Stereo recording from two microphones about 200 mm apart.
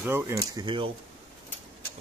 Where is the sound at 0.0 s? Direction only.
15° right (ahead or behind).